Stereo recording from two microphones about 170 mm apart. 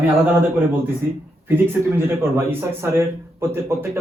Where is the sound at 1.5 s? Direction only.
10° right (ahead or behind).